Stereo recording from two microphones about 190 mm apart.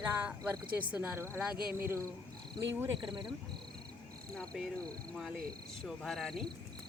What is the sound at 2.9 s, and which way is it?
Cricket, 25° right (ahead or behind).